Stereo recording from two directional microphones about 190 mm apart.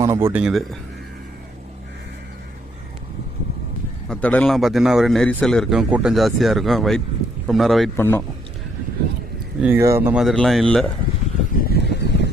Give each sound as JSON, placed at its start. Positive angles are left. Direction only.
{"t": 0.0, "sound": "speech", "side_deg": -15}
{"t": 0.4, "sound": "a man's voice", "side_deg": 0}
{"t": 4.1, "sound": "a man's voice", "side_deg": 5}
{"t": 7.9, "sound": "speech", "side_deg": 10}
{"t": 9.6, "sound": "a man's voice", "side_deg": -10}
{"t": 11.5, "sound": "a sound", "side_deg": 60}